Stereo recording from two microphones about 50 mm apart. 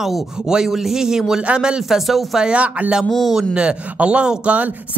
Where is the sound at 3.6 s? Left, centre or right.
Right.